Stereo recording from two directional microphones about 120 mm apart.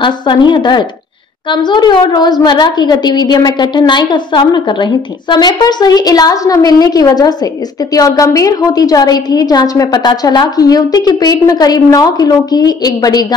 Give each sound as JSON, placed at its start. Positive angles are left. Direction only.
{"t": 0.0, "sound": "a woman's voice", "side_deg": 40}